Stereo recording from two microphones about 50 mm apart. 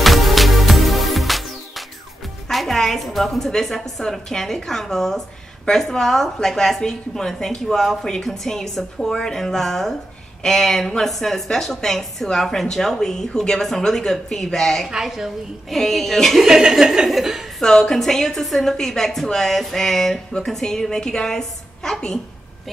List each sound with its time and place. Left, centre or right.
0.0 s music: centre
2.4 s a woman's voice: centre
14.9 s speech: centre
15.7 s speech: centre
16.4 s speech: centre
17.6 s a woman's voice: centre